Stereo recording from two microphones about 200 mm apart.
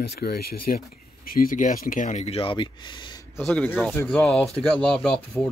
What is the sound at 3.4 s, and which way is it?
Speech, 5° left (ahead or behind).